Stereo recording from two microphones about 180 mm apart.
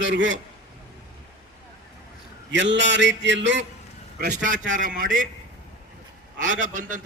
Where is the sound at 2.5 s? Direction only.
85° right.